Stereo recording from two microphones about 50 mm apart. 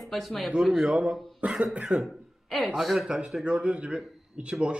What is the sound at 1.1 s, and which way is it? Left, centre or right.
Speech, centre.